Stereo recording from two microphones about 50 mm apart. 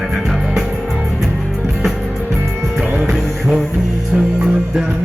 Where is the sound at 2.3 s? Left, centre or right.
Centre.